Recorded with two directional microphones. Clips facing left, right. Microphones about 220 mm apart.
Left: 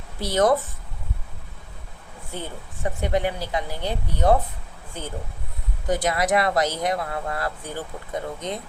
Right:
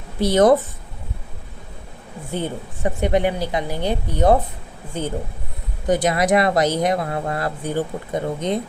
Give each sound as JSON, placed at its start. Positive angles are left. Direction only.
{"t": 0.2, "sound": "speech", "side_deg": -20}
{"t": 2.3, "sound": "speech", "side_deg": -20}